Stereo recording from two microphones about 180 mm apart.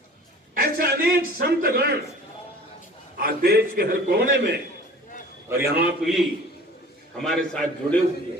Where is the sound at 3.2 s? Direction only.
55° right (ahead or behind).